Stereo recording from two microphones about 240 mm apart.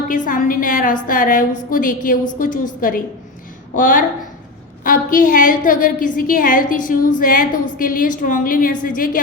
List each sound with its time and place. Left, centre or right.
0.1 s a woman's voice: left
4.8 s a woman's voice: left